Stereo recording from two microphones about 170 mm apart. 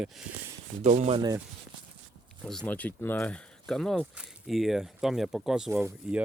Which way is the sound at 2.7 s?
10° left (ahead or behind).